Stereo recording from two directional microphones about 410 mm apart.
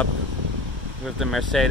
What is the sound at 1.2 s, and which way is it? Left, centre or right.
Speech, centre.